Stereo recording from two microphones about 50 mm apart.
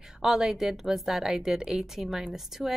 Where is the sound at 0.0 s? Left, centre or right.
Centre.